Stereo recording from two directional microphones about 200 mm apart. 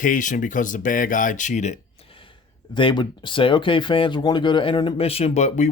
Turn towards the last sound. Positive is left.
turn(degrees=35)  # may be behind; listen again after turning